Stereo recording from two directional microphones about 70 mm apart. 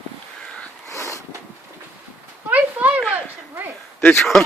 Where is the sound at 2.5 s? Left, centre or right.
Right.